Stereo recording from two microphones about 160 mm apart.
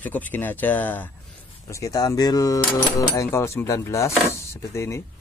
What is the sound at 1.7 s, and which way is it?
Speech, 20° left (ahead or behind).